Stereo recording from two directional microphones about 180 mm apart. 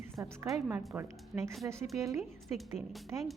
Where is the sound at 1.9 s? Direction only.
20° right (ahead or behind).